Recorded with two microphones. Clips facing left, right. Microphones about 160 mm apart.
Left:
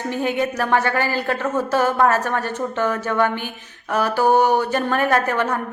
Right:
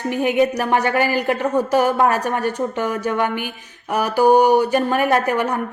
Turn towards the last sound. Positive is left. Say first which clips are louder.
# right 1 dB
turn(degrees=-15)  # may be behind; listen again after turning